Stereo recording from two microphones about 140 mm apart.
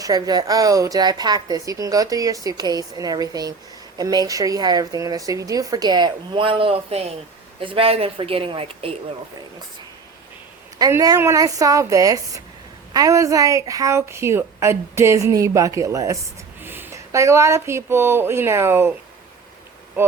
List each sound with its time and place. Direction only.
0.0 s a woman's voice: 30° right (ahead or behind)
10.8 s a woman's voice: 25° right (ahead or behind)